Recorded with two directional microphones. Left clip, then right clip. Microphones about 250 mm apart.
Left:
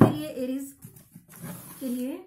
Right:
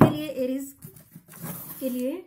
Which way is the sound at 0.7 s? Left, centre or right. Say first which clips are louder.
Right 3 dB; centre.